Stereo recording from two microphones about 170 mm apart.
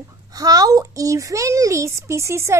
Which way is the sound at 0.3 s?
20° right (ahead or behind).